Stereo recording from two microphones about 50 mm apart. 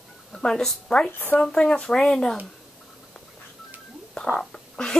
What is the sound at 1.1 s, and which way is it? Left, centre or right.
Speech, left.